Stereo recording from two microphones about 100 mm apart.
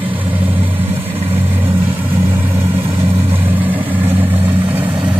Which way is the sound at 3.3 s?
20° right (ahead or behind).